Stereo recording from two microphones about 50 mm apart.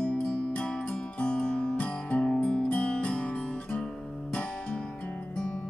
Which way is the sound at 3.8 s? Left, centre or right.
Centre.